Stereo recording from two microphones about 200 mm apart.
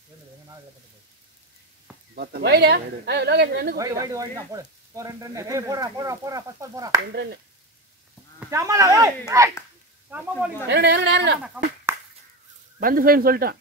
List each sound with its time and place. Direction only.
2.1 s speech: 50° right (ahead or behind)
3.7 s speech: 15° right (ahead or behind)
8.4 s speech: 15° right (ahead or behind)
10.7 s speech: 55° right (ahead or behind)
11.4 s speech: 5° right (ahead or behind)
12.8 s speech: 45° right (ahead or behind)